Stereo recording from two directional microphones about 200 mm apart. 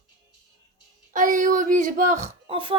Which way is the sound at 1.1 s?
40° right (ahead or behind).